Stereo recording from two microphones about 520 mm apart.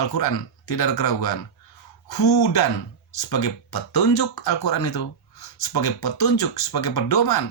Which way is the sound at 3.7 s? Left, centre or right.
Left.